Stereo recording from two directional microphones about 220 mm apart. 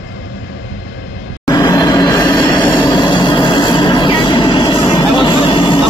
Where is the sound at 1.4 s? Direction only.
15° left (ahead or behind).